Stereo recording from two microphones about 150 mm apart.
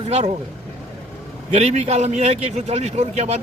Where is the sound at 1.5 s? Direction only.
50° right (ahead or behind).